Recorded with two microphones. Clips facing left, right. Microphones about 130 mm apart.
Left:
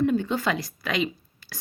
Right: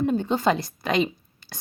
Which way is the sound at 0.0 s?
30° right (ahead or behind).